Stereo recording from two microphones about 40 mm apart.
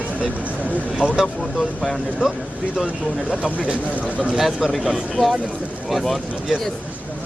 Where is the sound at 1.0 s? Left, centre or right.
Right.